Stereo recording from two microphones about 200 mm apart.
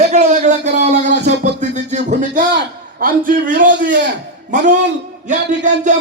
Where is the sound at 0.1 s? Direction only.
35° right (ahead or behind).